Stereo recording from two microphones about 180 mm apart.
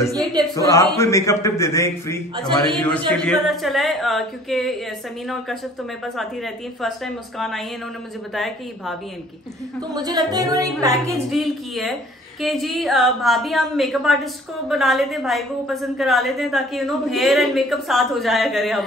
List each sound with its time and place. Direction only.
0.9 s a man's voice: 15° left (ahead or behind)
2.7 s a woman's voice: 5° left (ahead or behind)
6.0 s a woman's voice: centre (ahead or behind)
9.8 s a woman's voice: 20° right (ahead or behind)
11.2 s a woman's voice: centre (ahead or behind)